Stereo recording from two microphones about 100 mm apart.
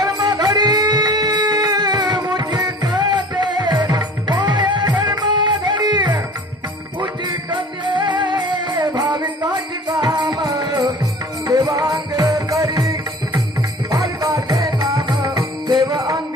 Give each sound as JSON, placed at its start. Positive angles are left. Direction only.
{"t": 0.0, "sound": "music", "side_deg": -40}